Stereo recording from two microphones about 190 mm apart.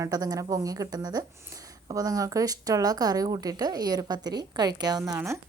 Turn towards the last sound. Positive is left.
turn(degrees=-15)  # may be behind; listen again after turning